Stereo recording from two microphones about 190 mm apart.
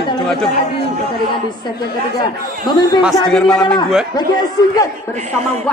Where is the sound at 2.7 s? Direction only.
25° left (ahead or behind).